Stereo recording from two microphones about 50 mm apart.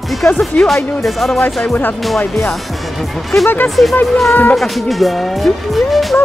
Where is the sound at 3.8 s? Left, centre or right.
Centre.